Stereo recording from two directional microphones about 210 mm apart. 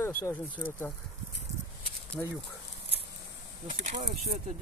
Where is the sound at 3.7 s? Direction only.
35° right (ahead or behind).